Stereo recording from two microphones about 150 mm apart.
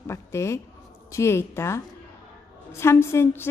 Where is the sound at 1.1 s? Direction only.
15° left (ahead or behind).